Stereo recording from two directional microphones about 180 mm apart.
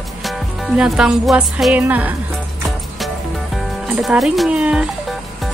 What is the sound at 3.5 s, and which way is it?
Speech, 5° right (ahead or behind).